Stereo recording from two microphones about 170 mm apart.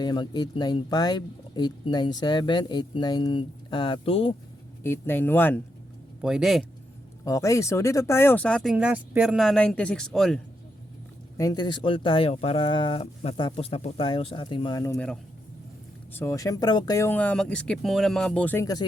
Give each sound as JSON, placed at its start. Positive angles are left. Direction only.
{"t": 0.0, "sound": "speech", "side_deg": 25}
{"t": 4.8, "sound": "speech", "side_deg": 15}
{"t": 6.2, "sound": "speech", "side_deg": -5}
{"t": 7.3, "sound": "speech", "side_deg": 20}
{"t": 8.7, "sound": "speech", "side_deg": -5}
{"t": 11.3, "sound": "speech", "side_deg": 25}
{"t": 14.9, "sound": "speech", "side_deg": 5}
{"t": 16.1, "sound": "speech", "side_deg": 15}